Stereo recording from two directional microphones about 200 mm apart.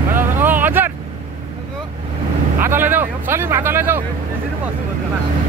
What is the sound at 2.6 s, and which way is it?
Speech, 10° right (ahead or behind).